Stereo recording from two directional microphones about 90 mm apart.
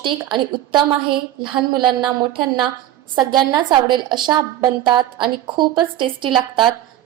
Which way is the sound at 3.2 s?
50° right (ahead or behind).